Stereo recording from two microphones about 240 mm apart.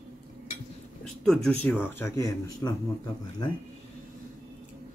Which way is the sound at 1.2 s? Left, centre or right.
Centre.